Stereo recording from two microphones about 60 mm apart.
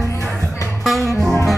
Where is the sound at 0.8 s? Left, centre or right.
Centre.